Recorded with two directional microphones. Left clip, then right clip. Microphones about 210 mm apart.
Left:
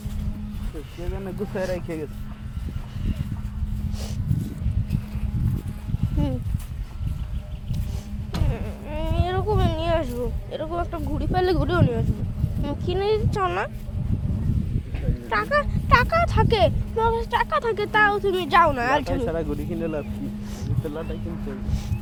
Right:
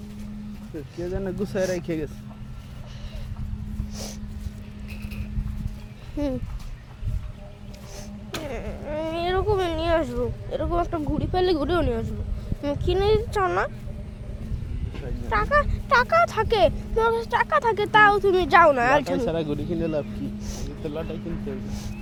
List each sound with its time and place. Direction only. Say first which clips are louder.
1.1 s speech: right 2 dB; 40° right (ahead or behind)
8.4 s a sound: right 2 dB; 10° right (ahead or behind)
11.2 s speech: left 1 dB; 5° left (ahead or behind)
15.4 s speech: left 1 dB; 10° right (ahead or behind)
16.9 s speech: even; 20° right (ahead or behind)
20.4 s music: even; 20° right (ahead or behind)
20.8 s speech: right 1 dB; 15° right (ahead or behind)